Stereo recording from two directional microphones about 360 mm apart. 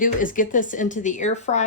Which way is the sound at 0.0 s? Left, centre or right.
Left.